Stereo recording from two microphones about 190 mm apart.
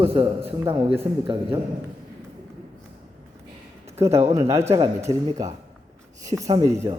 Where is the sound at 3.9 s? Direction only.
15° right (ahead or behind).